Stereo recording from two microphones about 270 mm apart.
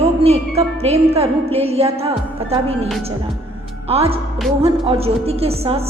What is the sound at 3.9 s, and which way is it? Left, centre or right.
A woman's voice, right.